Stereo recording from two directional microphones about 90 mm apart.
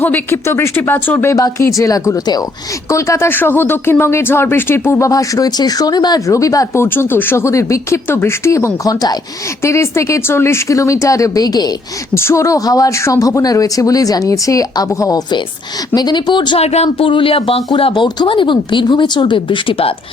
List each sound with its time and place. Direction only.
0.0 s speech: 25° left (ahead or behind)
1.3 s speech: 40° left (ahead or behind)
2.9 s speech: 35° left (ahead or behind)
6.8 s speech: 25° left (ahead or behind); by 9.1 s 45° left (ahead or behind)
9.6 s speech: 30° left (ahead or behind); by 11.7 s 45° left (ahead or behind)
12.1 s speech: 30° left (ahead or behind)
16.0 s speech: 55° left (ahead or behind)
17.0 s speech: 80° left
17.7 s speech: 80° left